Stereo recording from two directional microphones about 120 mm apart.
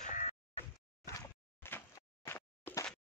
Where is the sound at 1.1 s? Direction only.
20° left (ahead or behind).